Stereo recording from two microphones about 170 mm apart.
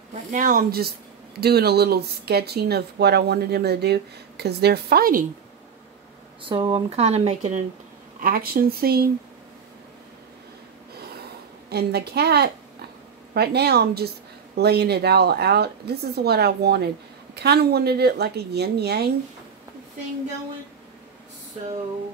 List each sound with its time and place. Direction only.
0.3 s speech: 50° right (ahead or behind)
1.4 s speech: 70° right (ahead or behind)
6.4 s speech: 30° right (ahead or behind)
8.2 s speech: 60° right (ahead or behind)
11.7 s speech: 70° right (ahead or behind)